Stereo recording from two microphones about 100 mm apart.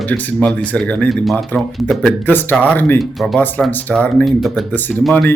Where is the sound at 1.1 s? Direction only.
Centre (ahead or behind).